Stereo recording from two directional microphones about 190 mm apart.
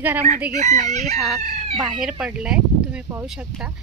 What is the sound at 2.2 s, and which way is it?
Speech, 5° right (ahead or behind).